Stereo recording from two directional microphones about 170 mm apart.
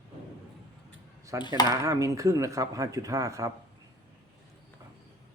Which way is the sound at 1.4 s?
25° left (ahead or behind).